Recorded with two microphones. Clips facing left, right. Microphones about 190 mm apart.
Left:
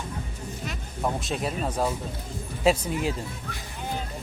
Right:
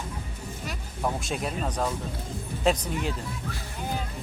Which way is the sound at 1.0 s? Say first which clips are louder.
Left 1 dB; centre (ahead or behind).